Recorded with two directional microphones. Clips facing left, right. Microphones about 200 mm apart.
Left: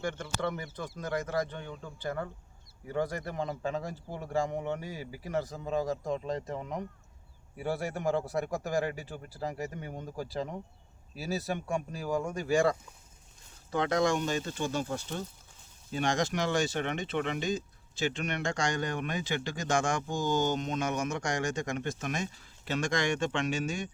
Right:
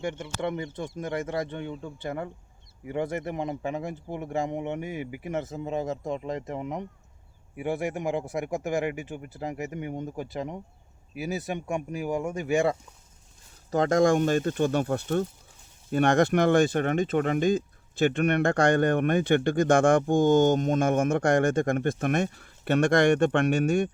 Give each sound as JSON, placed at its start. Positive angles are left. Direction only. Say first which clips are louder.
{"t": 0.0, "sound": "a man's voice", "louder": "right 3 dB", "side_deg": -20}
{"t": 13.7, "sound": "speech", "louder": "right 6 dB", "side_deg": -40}